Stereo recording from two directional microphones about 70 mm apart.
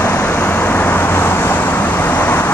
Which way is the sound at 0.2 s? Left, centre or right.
Left.